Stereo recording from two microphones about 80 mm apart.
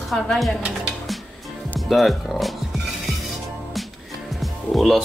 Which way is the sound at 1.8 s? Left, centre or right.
Centre.